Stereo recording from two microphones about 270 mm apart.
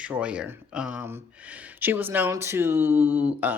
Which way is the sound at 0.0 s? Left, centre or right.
Centre.